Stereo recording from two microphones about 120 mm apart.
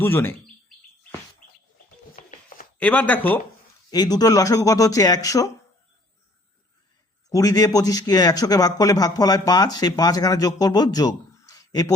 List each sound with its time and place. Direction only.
0.0 s speech: 20° left (ahead or behind)
2.7 s speech: 10° left (ahead or behind)
3.9 s speech: 35° left (ahead or behind)
7.3 s speech: 30° left (ahead or behind)